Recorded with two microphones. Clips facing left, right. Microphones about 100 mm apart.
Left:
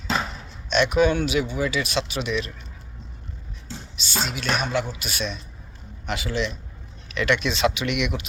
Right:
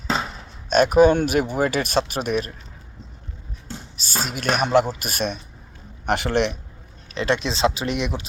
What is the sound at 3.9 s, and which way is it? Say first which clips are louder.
A man's voice: even; 40° right (ahead or behind).